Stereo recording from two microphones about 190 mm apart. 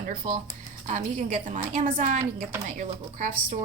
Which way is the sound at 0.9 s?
40° right (ahead or behind).